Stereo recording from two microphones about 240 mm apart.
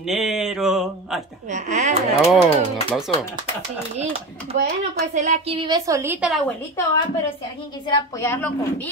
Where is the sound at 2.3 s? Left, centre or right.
Centre.